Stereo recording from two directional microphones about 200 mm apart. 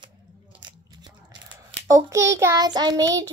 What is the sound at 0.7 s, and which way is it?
Biting, 20° right (ahead or behind).